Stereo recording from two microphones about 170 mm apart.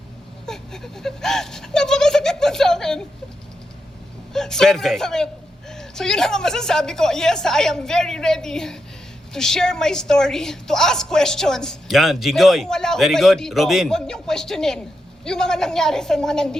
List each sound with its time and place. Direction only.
0.4 s a woman's voice: 5° left (ahead or behind)
4.3 s a woman's voice: 5° left (ahead or behind)